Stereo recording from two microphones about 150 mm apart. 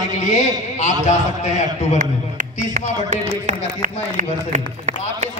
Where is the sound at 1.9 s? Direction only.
60° right (ahead or behind).